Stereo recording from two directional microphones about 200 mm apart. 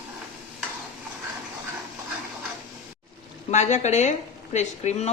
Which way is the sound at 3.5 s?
35° left (ahead or behind).